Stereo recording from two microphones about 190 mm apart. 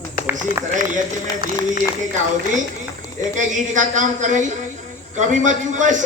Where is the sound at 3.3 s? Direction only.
40° right (ahead or behind).